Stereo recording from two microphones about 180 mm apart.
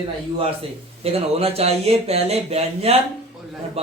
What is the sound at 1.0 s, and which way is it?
A man's voice, 35° right (ahead or behind).